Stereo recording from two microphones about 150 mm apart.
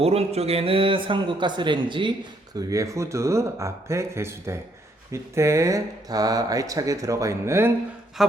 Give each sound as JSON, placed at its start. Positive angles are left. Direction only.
{"t": 0.0, "sound": "a man's voice", "side_deg": -40}
{"t": 2.6, "sound": "speech", "side_deg": -20}
{"t": 8.2, "sound": "speech", "side_deg": 0}